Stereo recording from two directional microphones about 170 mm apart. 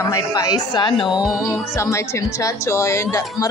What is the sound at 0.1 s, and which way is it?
Speech, 20° left (ahead or behind).